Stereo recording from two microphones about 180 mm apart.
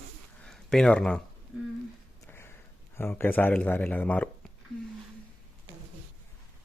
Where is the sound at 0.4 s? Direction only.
5° left (ahead or behind).